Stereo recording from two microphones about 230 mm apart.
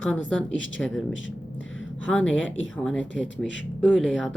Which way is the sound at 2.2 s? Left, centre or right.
Left.